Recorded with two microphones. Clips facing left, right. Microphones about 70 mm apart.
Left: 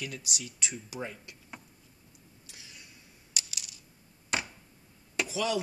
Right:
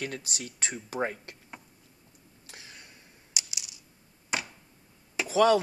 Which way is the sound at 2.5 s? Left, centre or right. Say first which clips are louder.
Right 4 dB; right.